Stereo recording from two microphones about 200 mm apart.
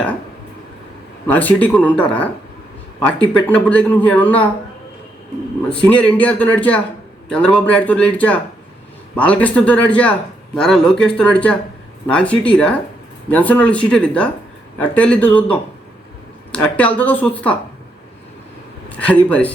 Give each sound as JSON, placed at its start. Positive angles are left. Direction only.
{"t": 1.3, "sound": "speech", "side_deg": 10}
{"t": 5.8, "sound": "a man's voice", "side_deg": 5}
{"t": 18.9, "sound": "speech", "side_deg": 5}